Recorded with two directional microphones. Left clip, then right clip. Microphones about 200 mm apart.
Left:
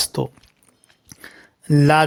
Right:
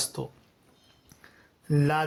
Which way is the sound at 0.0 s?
35° left (ahead or behind).